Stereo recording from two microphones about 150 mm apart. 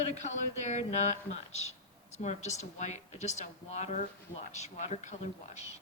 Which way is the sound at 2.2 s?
50° left (ahead or behind).